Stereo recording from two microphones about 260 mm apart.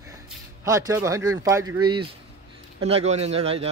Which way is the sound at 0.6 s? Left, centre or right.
Centre.